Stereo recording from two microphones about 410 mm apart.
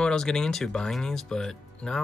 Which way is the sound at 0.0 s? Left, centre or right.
Centre.